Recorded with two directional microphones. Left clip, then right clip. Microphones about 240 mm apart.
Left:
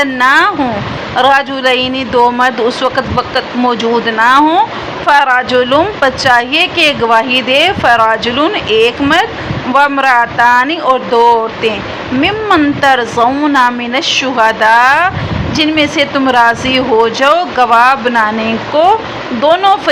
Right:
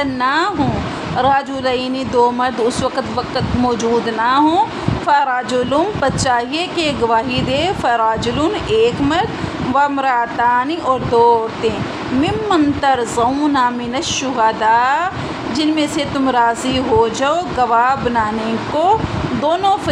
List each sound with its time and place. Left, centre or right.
0.0 s a woman's voice: centre